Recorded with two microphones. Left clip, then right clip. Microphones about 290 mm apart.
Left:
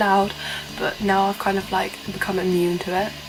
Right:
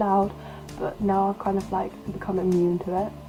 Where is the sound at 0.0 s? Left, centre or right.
Centre.